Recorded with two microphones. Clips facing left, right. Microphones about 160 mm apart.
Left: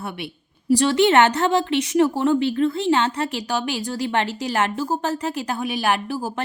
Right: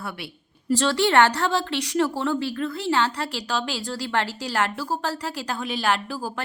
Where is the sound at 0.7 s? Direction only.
15° left (ahead or behind).